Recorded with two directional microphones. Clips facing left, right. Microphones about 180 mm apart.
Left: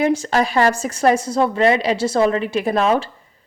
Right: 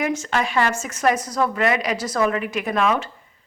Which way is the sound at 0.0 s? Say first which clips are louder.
Left 5 dB; 35° left (ahead or behind).